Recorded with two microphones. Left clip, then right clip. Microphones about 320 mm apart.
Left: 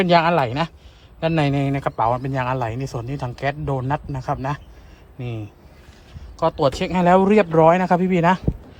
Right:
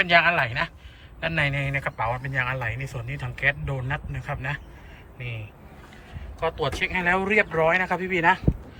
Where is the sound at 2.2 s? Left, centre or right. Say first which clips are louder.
Left 4 dB; left.